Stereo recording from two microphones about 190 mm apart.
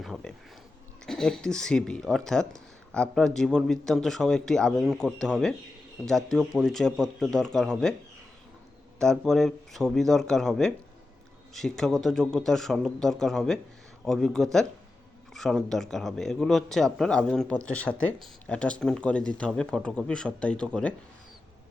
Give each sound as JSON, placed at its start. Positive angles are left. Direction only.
{"t": 0.0, "sound": "a sound", "side_deg": 0}
{"t": 1.0, "sound": "speech", "side_deg": 5}
{"t": 9.0, "sound": "speech", "side_deg": 0}